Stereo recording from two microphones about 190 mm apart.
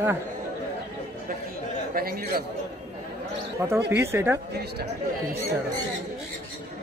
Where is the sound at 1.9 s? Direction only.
50° right (ahead or behind).